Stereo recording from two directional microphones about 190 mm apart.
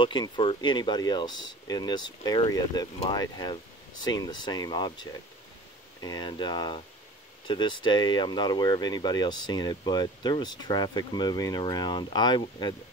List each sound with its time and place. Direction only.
0.0 s speech: 25° left (ahead or behind)